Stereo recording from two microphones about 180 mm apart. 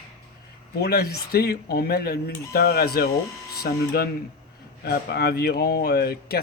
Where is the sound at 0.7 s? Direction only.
60° left (ahead or behind).